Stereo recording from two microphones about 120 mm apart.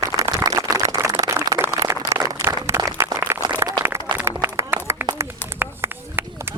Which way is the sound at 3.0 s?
25° right (ahead or behind).